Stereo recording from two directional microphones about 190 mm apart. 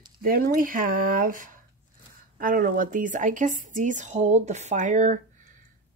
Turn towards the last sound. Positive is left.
turn(degrees=-45)  # may be behind; listen again after turning